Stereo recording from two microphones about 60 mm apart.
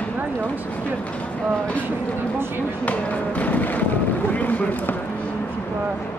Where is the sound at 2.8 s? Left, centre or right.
Left.